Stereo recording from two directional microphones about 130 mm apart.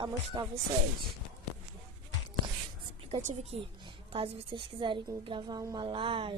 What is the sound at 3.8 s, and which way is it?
A woman's voice, 40° right (ahead or behind).